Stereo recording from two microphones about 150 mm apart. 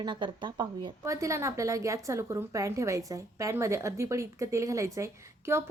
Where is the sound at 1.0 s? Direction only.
20° right (ahead or behind).